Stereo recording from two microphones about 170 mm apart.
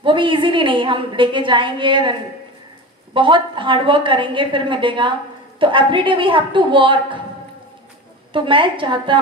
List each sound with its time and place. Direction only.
0.0 s a woman's voice: 30° right (ahead or behind)
3.2 s a woman's voice: 30° right (ahead or behind)
8.3 s a woman's voice: 30° right (ahead or behind)